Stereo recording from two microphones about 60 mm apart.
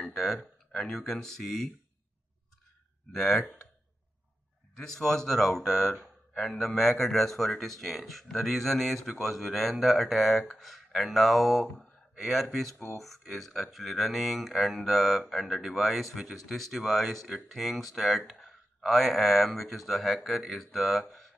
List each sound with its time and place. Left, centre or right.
0.0 s speech: centre
3.1 s speech: centre
4.7 s speech: centre